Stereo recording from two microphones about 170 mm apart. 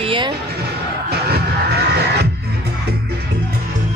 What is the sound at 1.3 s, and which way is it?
Music, 70° right (ahead or behind).